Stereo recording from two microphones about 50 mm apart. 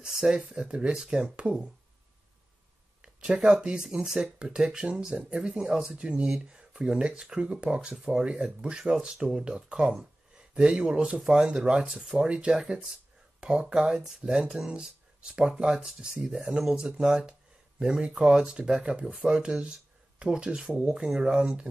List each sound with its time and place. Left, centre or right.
0.0 s speech: centre
3.0 s speech: centre
5.9 s speech: right
12.2 s speech: centre
13.4 s speech: right